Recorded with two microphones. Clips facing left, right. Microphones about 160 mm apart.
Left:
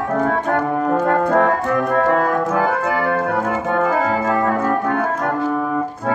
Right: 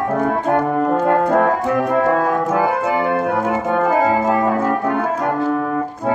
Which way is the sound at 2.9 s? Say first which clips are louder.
Right 1 dB; 15° right (ahead or behind).